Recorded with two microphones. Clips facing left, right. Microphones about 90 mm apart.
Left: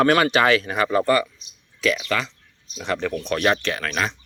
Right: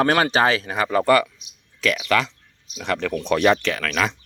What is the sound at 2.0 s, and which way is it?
Speech, 90° right.